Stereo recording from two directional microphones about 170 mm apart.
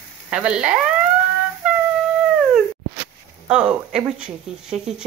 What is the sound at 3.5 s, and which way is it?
Speech, 5° right (ahead or behind).